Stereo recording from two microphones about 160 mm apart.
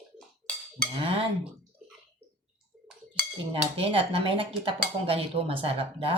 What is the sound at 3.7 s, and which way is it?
Speech, 35° right (ahead or behind).